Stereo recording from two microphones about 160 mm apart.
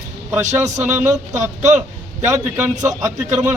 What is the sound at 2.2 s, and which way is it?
Speech, 20° right (ahead or behind).